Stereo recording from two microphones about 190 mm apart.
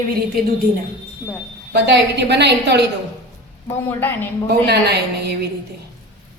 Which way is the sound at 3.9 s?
10° left (ahead or behind).